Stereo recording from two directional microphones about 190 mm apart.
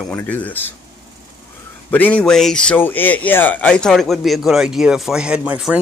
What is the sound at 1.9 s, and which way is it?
Speech, 10° left (ahead or behind).